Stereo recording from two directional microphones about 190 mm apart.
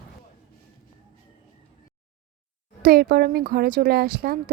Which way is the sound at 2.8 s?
50° right (ahead or behind).